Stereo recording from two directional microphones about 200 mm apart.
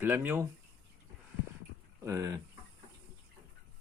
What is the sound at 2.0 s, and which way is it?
Speech, 15° right (ahead or behind).